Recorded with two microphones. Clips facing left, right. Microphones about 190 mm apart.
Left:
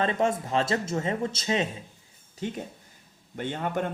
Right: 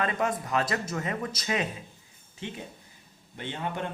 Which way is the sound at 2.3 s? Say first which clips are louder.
Left 5 dB; 45° left (ahead or behind).